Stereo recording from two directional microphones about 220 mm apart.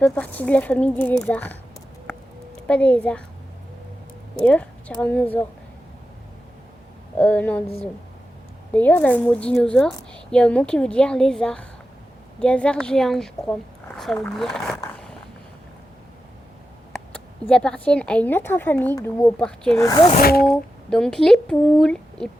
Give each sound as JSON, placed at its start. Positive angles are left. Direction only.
{"t": 0.0, "sound": "a woman's voice", "side_deg": 5}
{"t": 2.6, "sound": "a woman's voice", "side_deg": 5}
{"t": 4.4, "sound": "a woman's voice", "side_deg": 5}
{"t": 7.2, "sound": "a woman's voice", "side_deg": 5}
{"t": 8.7, "sound": "a woman's voice", "side_deg": 5}
{"t": 17.5, "sound": "a woman's voice", "side_deg": 5}
{"t": 19.8, "sound": "speech", "side_deg": 20}
{"t": 20.2, "sound": "speech", "side_deg": 45}
{"t": 20.5, "sound": "a woman's voice", "side_deg": 5}